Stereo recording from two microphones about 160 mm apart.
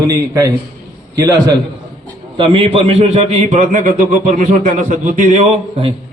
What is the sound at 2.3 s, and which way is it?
A man's voice, 30° right (ahead or behind).